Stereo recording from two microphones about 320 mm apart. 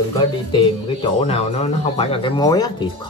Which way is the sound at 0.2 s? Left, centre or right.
Centre.